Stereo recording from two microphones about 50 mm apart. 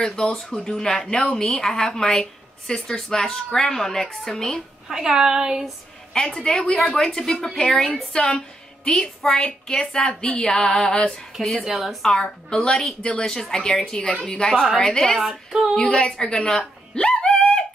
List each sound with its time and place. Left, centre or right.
0.0 s a woman's voice: centre
4.8 s speech: centre
6.1 s a woman's voice: centre
11.3 s a woman's voice: centre
11.6 s speech: centre
12.1 s a woman's voice: centre
15.1 s speech: centre
15.7 s a woman's voice: centre
16.4 s a sound: centre